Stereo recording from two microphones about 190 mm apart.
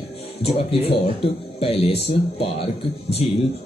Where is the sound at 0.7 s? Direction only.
30° left (ahead or behind).